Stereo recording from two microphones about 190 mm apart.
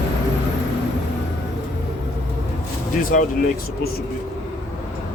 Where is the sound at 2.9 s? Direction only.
45° left (ahead or behind).